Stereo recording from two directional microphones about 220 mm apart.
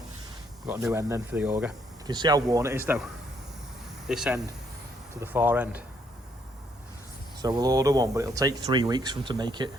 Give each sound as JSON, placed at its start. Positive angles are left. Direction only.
{"t": 0.7, "sound": "speech", "side_deg": -10}
{"t": 2.0, "sound": "speech", "side_deg": -20}
{"t": 7.4, "sound": "speech", "side_deg": -15}